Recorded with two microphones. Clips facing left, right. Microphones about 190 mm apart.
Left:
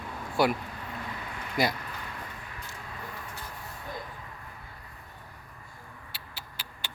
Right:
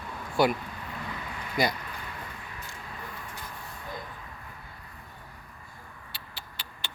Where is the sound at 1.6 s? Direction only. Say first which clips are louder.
Even; 5° left (ahead or behind).